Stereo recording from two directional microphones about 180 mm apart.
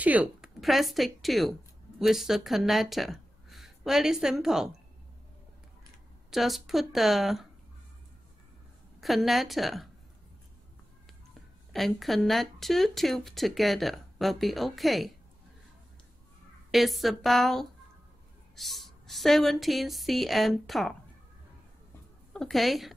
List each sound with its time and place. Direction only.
0.0 s speech: 10° right (ahead or behind)
6.3 s speech: centre (ahead or behind)
9.0 s speech: centre (ahead or behind)
11.7 s speech: centre (ahead or behind)
16.7 s speech: centre (ahead or behind)
22.3 s a woman's voice: centre (ahead or behind)